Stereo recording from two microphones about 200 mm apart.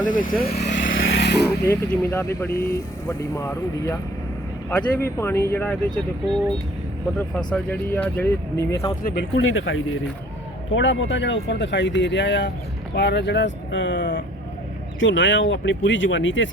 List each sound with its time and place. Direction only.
0.0 s speech: 40° left (ahead or behind)
0.6 s vehicle: 40° left (ahead or behind)
0.9 s vehicle: 70° left (ahead or behind)
1.5 s speech: 15° left (ahead or behind)
7.2 s speech: 5° left (ahead or behind)
9.0 s speech: 55° left (ahead or behind)
9.5 s speech: 80° left
10.7 s speech: 65° left (ahead or behind)